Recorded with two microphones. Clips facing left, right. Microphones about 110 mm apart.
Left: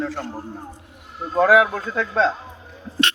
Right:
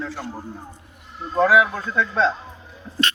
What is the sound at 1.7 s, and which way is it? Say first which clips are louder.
Speech: even; 45° left (ahead or behind).